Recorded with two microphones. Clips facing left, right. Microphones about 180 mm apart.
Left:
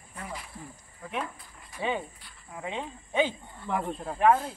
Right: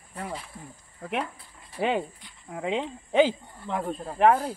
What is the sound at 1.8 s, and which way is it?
Speech, 80° right.